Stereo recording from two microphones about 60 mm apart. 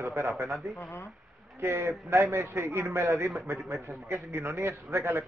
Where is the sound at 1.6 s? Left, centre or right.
Right.